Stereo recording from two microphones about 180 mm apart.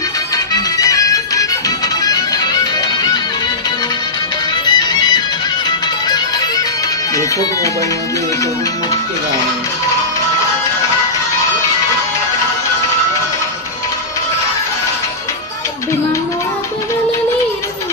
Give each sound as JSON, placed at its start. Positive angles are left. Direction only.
{"t": 0.3, "sound": "music", "side_deg": 20}
{"t": 4.6, "sound": "music", "side_deg": 25}